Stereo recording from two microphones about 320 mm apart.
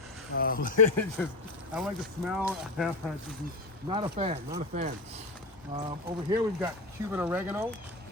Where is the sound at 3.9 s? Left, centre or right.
Centre.